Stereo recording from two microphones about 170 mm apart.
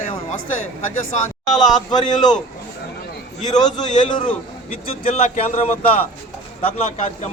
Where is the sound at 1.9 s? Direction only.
25° left (ahead or behind).